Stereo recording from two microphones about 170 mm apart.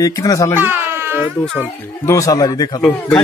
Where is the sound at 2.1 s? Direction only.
20° left (ahead or behind).